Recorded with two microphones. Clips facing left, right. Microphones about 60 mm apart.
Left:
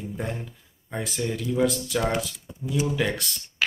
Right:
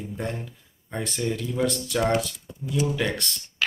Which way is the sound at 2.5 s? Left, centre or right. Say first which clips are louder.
Even; centre.